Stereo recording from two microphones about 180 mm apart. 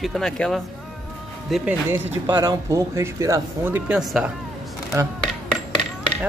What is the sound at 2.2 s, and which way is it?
Speech, 20° right (ahead or behind).